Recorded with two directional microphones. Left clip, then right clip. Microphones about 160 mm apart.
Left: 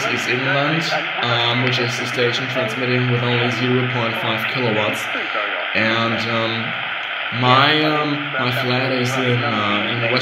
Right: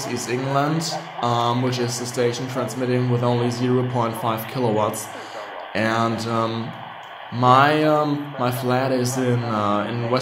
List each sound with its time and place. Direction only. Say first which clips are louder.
1.2 s a man's voice: even; 20° right (ahead or behind)
4.0 s a man's voice: left 3 dB; 20° right (ahead or behind)
7.4 s a man's voice: even; 20° right (ahead or behind)